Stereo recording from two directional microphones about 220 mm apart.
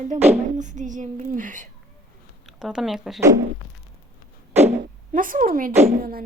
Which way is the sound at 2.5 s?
5° right (ahead or behind).